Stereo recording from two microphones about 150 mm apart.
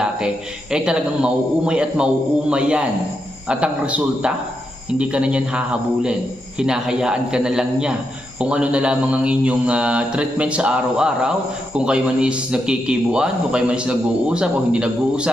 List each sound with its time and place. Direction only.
0.0 s a man's voice: 5° right (ahead or behind)